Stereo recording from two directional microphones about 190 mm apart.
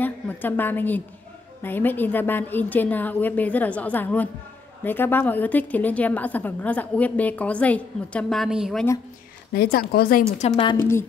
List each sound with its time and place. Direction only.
0.0 s a sound: 10° left (ahead or behind)
1.6 s a woman's voice: 10° left (ahead or behind)
9.5 s speech: 55° left (ahead or behind)
10.4 s a woman's voice: 30° left (ahead or behind)
10.8 s a woman's voice: 15° left (ahead or behind)